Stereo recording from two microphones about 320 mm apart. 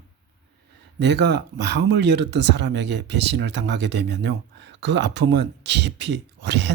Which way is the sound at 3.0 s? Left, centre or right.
Right.